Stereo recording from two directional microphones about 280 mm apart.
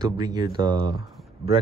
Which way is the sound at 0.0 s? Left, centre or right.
Centre.